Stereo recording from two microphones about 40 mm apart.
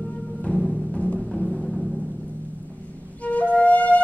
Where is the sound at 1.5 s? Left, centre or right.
Centre.